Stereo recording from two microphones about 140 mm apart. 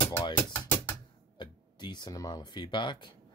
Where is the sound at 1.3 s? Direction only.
30° left (ahead or behind).